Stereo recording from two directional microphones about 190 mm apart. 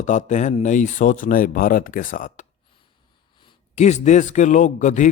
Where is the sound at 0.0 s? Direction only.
40° left (ahead or behind).